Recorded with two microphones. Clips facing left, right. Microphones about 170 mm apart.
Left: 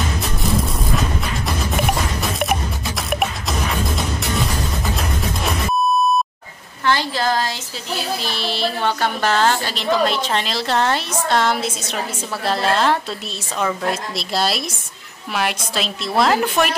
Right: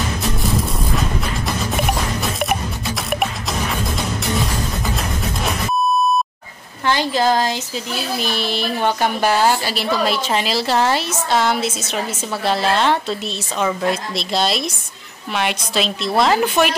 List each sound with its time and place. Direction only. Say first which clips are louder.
3.1 s music: left 1 dB; centre (ahead or behind)
6.9 s a woman's voice: right 2 dB; 20° right (ahead or behind); by 16.7 s centre (ahead or behind)